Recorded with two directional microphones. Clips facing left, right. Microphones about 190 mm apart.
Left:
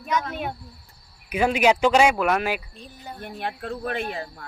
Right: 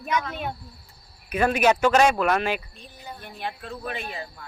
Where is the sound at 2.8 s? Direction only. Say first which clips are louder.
Left 3 dB; 50° left (ahead or behind).